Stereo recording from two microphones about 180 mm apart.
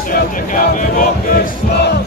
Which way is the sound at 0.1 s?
50° left (ahead or behind).